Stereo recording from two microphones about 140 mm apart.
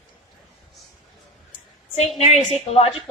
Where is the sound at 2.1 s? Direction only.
50° left (ahead or behind).